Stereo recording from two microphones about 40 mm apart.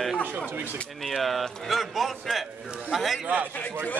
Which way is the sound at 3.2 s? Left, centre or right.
Right.